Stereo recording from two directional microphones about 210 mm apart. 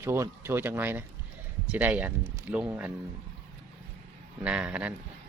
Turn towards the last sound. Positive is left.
turn(degrees=-5)  # may be behind; listen again after turning